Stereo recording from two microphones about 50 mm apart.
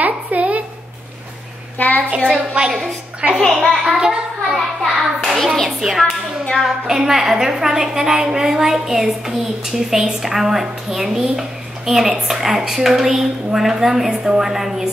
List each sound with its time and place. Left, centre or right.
0.0 s a sound: right
1.8 s a sound: left
2.0 s a woman's voice: right
3.6 s a child's voice: centre
4.6 s hands: centre
5.8 s a woman's voice: centre